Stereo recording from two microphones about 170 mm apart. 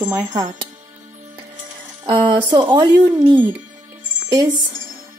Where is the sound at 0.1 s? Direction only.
20° right (ahead or behind).